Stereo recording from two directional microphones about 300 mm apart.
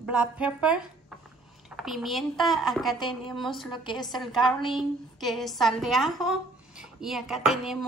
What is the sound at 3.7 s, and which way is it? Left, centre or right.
Speech, centre.